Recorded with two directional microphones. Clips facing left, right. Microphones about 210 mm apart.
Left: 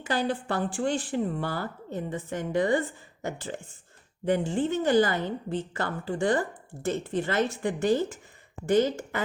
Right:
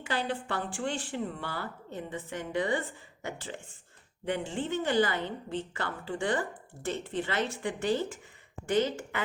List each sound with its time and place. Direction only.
0.0 s a woman's voice: 40° left (ahead or behind)